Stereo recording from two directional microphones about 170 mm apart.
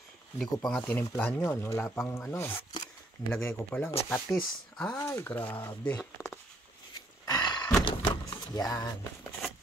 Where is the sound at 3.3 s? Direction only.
15° left (ahead or behind).